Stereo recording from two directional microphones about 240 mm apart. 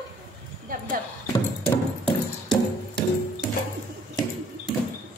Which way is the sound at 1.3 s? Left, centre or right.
Centre.